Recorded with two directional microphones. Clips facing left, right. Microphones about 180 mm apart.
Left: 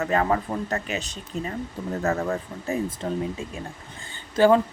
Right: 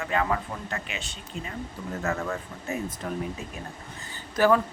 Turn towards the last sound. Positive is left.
turn(degrees=25)  # may be behind; listen again after turning